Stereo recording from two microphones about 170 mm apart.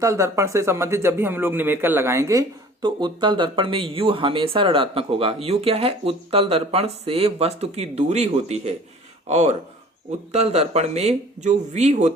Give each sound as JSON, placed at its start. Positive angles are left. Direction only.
{"t": 0.0, "sound": "speech", "side_deg": -15}
{"t": 2.8, "sound": "speech", "side_deg": -25}